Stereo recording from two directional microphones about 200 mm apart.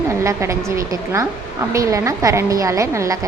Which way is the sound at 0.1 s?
15° right (ahead or behind).